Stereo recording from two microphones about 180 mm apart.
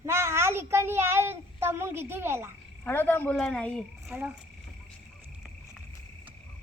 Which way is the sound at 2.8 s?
10° left (ahead or behind).